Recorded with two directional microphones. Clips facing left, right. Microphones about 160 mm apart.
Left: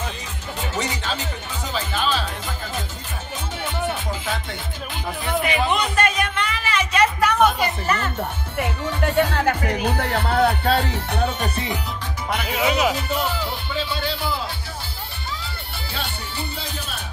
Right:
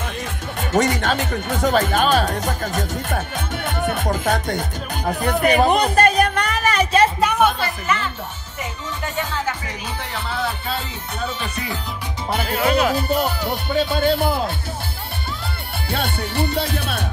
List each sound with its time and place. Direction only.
0.6 s speech: 50° right (ahead or behind)
3.6 s music: 50° right (ahead or behind); by 7.3 s 25° right (ahead or behind)
7.8 s speech: 40° left (ahead or behind)
8.5 s speech: 60° left (ahead or behind)
11.4 s music: 30° left (ahead or behind)
12.4 s speech: 5° left (ahead or behind)
12.9 s speech: 40° right (ahead or behind)
13.7 s speech: 50° right (ahead or behind)
15.9 s speech: 60° right (ahead or behind)